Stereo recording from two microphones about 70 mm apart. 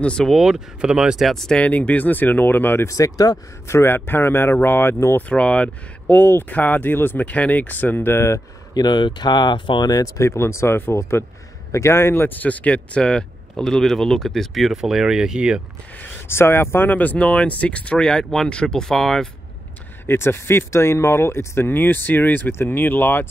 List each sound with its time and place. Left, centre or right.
0.0 s speech: centre
0.3 s speech: centre
1.2 s speech: centre
1.6 s speech: left
2.9 s speech: left
3.6 s speech: left
5.3 s speech: centre; by 8.4 s left
8.7 s speech: left
10.2 s speech: left; by 15.6 s centre
16.0 s speech: left; by 19.2 s centre
20.1 s speech: left